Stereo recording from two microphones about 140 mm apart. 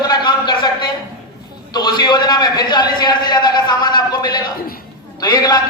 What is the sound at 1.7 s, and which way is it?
A man's voice, 30° left (ahead or behind).